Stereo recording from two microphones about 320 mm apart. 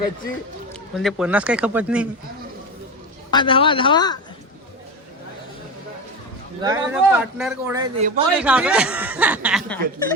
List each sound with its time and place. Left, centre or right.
0.9 s speech: centre
3.3 s speech: centre
6.6 s a man's voice: centre